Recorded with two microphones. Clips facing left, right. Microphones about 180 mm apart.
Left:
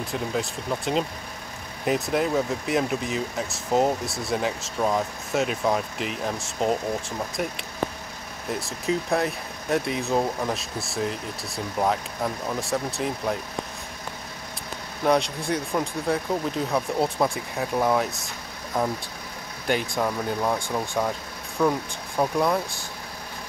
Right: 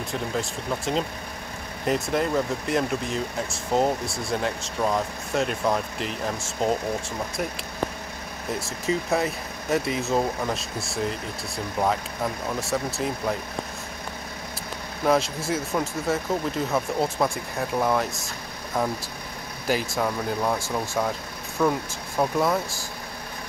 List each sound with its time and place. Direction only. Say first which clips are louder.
0.0 s speech: left 1 dB; centre (ahead or behind)
15.0 s speech: even; centre (ahead or behind)